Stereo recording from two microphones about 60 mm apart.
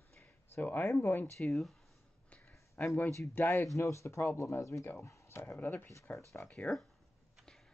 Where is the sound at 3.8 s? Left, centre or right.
Left.